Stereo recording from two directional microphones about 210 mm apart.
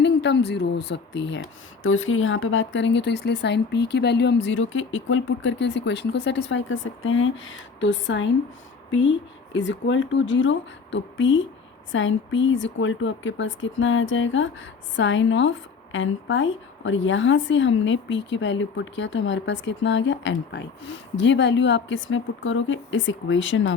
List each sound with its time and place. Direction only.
0.0 s speech: 55° left (ahead or behind)
1.8 s speech: 70° left (ahead or behind)